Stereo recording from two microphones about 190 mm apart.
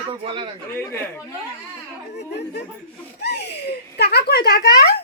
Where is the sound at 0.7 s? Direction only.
10° left (ahead or behind).